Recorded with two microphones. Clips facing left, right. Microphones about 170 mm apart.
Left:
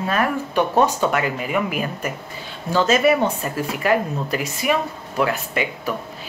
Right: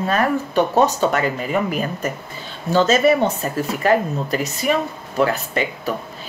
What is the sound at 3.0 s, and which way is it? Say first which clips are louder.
A woman's voice: right 2 dB; 35° right (ahead or behind).